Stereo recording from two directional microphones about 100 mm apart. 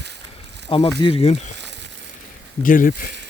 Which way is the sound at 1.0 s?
80° left.